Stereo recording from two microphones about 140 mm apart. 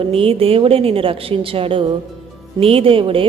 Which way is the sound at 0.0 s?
40° right (ahead or behind).